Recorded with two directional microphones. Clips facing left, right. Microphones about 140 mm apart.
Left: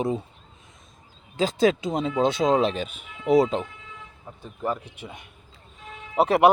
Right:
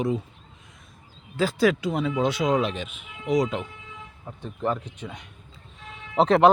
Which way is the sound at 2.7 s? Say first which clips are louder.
Left 3 dB; 35° left (ahead or behind).